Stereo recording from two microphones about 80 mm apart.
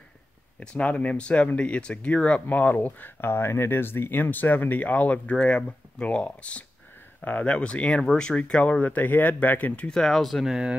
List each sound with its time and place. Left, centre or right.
0.6 s speech: centre